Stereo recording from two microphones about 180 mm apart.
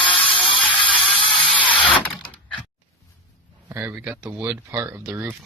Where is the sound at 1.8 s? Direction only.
5° left (ahead or behind).